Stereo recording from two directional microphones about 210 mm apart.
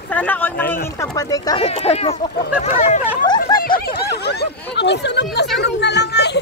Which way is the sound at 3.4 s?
45° left (ahead or behind).